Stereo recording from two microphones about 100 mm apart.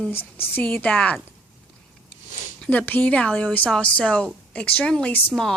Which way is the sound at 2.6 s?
15° left (ahead or behind).